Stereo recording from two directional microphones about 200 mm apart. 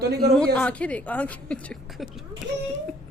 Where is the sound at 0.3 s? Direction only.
5° left (ahead or behind).